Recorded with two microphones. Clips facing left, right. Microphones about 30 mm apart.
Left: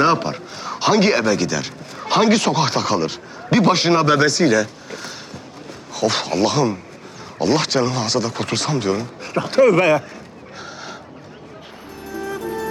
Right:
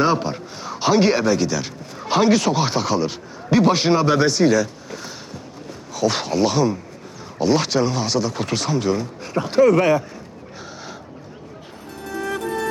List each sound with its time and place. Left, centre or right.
0.0 s a man's voice: left
10.6 s a sound: centre
12.0 s music: centre
12.3 s music: centre